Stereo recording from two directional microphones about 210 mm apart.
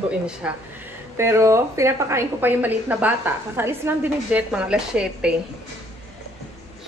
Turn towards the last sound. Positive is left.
turn(degrees=-5)  # may be behind; listen again after turning